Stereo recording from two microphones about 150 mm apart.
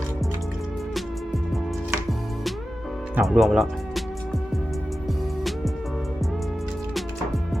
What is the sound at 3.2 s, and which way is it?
Speech, centre (ahead or behind).